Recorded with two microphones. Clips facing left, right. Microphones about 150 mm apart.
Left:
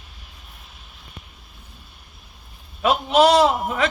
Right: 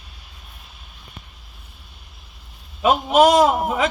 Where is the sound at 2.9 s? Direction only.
45° right (ahead or behind).